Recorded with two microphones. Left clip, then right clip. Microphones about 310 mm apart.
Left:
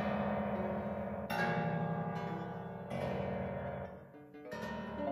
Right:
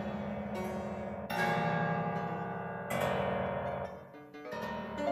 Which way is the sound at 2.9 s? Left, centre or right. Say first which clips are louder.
Right 6 dB; right.